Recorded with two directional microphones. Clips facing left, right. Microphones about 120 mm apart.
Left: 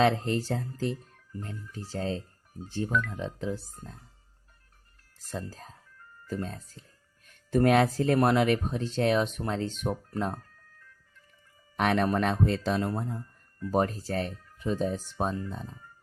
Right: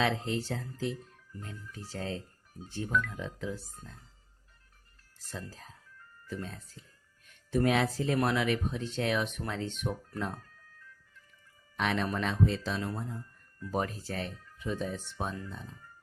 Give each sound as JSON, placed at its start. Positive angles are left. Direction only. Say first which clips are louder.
{"t": 0.0, "sound": "speech", "louder": "left 6 dB", "side_deg": 45}
{"t": 1.5, "sound": "speech", "louder": "left 4 dB", "side_deg": 30}
{"t": 5.3, "sound": "speech", "louder": "left 6 dB", "side_deg": 40}
{"t": 7.5, "sound": "speech", "louder": "left 5 dB", "side_deg": 55}
{"t": 11.8, "sound": "speech", "louder": "left 6 dB", "side_deg": 55}